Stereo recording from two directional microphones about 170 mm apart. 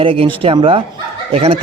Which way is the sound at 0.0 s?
30° right (ahead or behind).